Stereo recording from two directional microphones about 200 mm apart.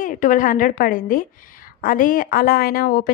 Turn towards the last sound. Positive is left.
turn(degrees=45)  # may be behind; listen again after turning